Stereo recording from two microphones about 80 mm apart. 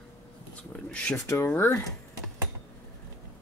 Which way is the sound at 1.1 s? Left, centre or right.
Left.